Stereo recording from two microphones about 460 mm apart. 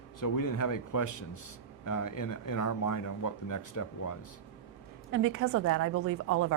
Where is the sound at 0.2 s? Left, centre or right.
Left.